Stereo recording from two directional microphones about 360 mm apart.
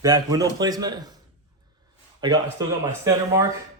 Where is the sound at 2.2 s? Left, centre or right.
Centre.